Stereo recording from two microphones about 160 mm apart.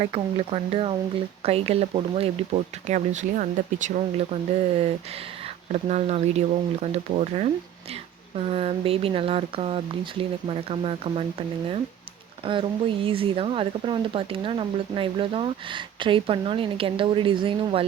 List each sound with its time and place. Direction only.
0.0 s speech: 35° right (ahead or behind)
13.1 s speech: 35° right (ahead or behind)